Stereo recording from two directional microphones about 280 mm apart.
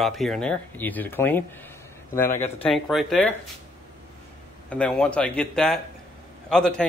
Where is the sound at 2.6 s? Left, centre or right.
Centre.